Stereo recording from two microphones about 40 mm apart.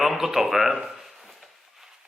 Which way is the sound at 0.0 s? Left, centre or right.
Centre.